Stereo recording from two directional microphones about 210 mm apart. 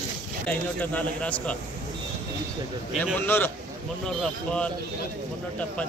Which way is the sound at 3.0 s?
10° left (ahead or behind).